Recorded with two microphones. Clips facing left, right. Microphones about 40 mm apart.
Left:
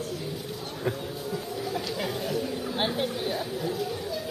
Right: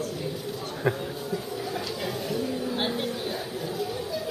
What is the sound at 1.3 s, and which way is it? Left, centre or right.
Music, centre.